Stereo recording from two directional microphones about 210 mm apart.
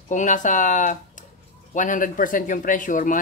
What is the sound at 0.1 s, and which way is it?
Speech, 35° left (ahead or behind).